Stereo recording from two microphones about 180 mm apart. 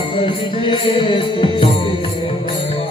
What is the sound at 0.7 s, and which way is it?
Music, 25° left (ahead or behind).